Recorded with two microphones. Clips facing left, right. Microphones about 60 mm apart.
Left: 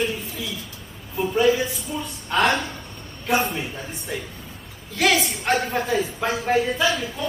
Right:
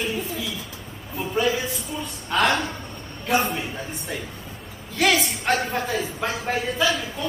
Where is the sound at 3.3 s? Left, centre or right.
Centre.